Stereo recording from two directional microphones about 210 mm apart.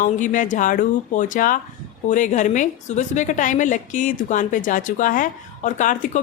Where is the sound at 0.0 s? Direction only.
35° left (ahead or behind).